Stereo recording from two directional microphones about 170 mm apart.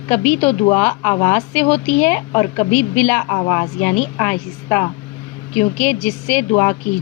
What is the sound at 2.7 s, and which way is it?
Speech, 45° left (ahead or behind).